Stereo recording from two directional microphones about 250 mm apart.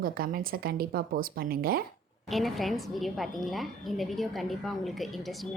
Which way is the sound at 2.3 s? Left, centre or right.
Centre.